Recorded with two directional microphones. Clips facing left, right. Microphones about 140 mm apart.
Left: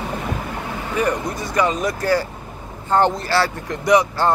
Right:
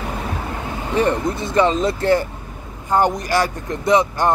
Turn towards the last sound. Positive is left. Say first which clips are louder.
# even
turn(degrees=-20)  # may be behind; listen again after turning